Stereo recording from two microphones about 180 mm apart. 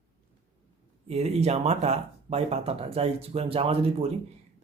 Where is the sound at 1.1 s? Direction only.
35° right (ahead or behind).